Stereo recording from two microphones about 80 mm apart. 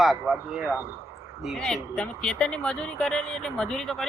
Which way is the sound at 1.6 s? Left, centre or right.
Centre.